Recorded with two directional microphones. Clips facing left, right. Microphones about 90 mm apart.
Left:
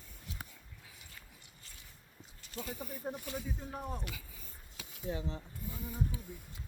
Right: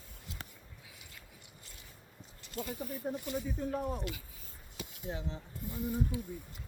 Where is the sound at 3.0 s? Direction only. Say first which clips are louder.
Right 3 dB; 30° left (ahead or behind).